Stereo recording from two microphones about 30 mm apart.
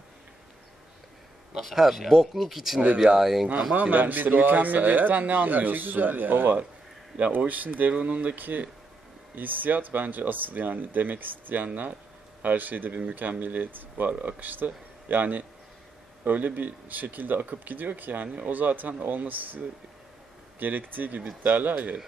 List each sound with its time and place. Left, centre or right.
1.6 s speech: centre
3.9 s speech: right
7.3 s speech: right
7.9 s speech: right
8.4 s speech: right
14.1 s speech: right
18.3 s speech: right
21.5 s speech: right